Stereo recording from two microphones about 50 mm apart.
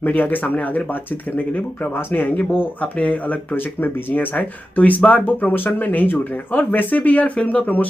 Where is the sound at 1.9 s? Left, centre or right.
Left.